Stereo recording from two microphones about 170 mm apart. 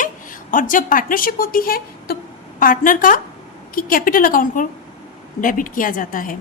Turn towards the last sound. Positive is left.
turn(degrees=55)  # may be behind; listen again after turning